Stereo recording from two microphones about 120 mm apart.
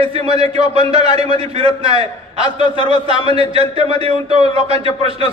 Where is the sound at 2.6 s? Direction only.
40° left (ahead or behind).